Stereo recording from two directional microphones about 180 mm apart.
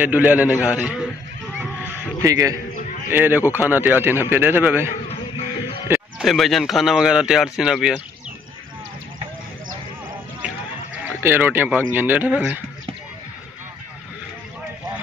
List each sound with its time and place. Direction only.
0.0 s speech: 10° right (ahead or behind)
2.2 s speech: 20° right (ahead or behind)
5.9 s speech: centre (ahead or behind)
11.1 s speech: 10° right (ahead or behind)